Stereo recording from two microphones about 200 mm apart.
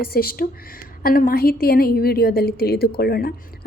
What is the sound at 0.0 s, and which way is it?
A woman's voice, 50° left (ahead or behind).